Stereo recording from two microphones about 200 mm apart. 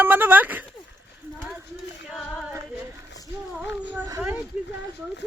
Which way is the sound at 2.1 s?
Centre (ahead or behind).